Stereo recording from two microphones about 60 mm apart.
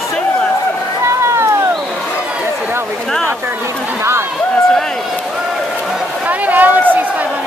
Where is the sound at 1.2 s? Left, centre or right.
Right.